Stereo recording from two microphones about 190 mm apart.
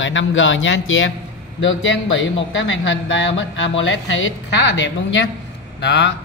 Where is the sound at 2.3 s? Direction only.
85° left.